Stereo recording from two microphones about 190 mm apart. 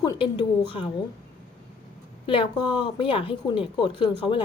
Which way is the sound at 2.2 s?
25° left (ahead or behind).